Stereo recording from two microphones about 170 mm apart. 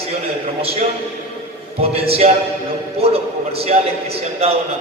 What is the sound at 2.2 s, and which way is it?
A man's voice, 45° right (ahead or behind).